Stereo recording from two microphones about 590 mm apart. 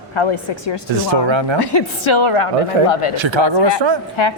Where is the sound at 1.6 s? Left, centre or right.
Left.